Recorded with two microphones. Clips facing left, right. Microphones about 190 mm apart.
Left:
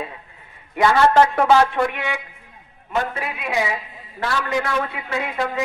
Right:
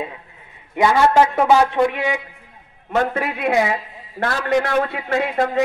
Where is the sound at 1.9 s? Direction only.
35° right (ahead or behind).